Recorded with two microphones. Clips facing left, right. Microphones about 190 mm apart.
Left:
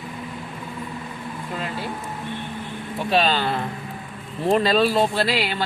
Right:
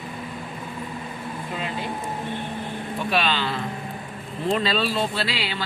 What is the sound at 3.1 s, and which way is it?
Speech, 40° left (ahead or behind).